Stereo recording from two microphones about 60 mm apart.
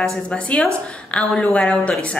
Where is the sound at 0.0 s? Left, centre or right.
Centre.